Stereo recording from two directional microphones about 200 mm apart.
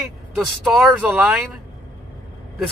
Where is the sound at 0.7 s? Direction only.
Centre (ahead or behind).